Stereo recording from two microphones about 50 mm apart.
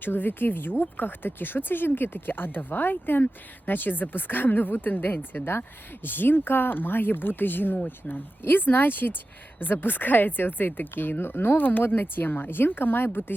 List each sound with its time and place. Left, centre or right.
0.0 s speech: left